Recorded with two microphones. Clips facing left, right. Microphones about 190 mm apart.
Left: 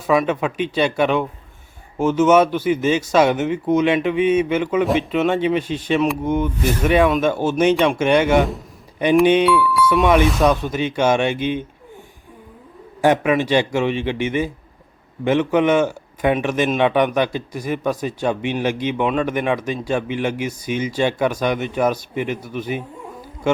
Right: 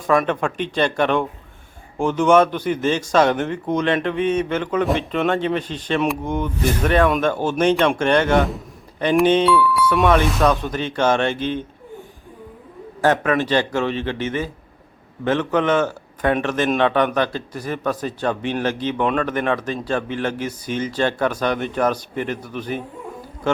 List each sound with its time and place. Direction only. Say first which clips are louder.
0.1 s speech: left 1 dB; 5° left (ahead or behind)
9.2 s speech: right 2 dB; 10° left (ahead or behind)
9.7 s speech: left 1 dB; centre (ahead or behind)
13.0 s speech: left 2 dB; 10° left (ahead or behind)